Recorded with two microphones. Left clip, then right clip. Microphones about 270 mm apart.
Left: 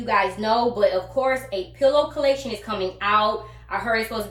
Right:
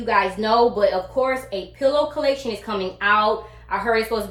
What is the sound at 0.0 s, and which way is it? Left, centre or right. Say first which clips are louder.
A woman's voice: right 2 dB; centre.